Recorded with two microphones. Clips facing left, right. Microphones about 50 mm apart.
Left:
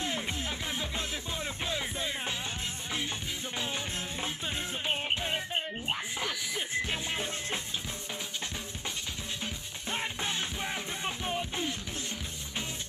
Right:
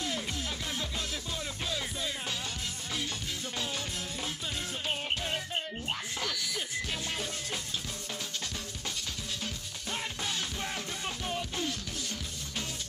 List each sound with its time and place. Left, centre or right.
0.0 s music: left
3.5 s music: left
9.4 s music: left